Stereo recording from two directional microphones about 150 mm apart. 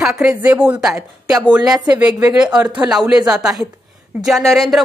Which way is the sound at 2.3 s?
5° right (ahead or behind).